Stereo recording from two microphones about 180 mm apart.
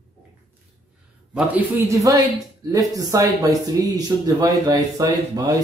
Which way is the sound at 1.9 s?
20° right (ahead or behind).